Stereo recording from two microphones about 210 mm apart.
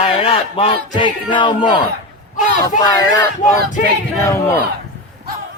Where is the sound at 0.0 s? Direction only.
25° left (ahead or behind).